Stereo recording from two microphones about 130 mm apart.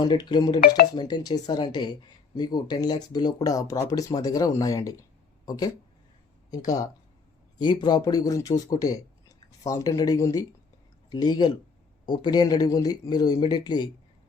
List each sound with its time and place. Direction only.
0.0 s speech: 35° left (ahead or behind)